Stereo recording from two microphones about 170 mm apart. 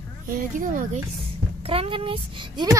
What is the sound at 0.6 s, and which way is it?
Speech, 50° right (ahead or behind).